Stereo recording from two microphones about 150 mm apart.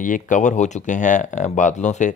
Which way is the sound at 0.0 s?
60° left (ahead or behind).